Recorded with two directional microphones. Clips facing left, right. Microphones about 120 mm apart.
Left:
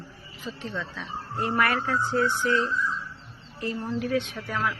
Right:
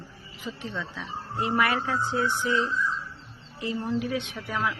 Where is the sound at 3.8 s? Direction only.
15° right (ahead or behind).